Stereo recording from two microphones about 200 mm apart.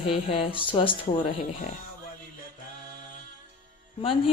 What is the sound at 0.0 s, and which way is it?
Speech, 30° left (ahead or behind).